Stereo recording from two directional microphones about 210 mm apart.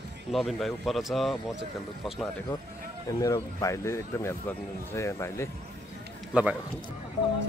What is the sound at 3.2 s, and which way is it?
Speech, 15° left (ahead or behind).